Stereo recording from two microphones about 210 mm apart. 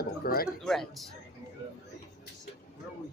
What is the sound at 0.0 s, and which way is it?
Speech, 45° left (ahead or behind).